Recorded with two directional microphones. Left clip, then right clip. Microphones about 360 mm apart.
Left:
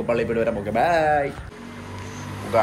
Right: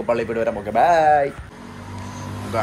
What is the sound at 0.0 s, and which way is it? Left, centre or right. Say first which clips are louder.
A man's voice: right 1 dB; centre.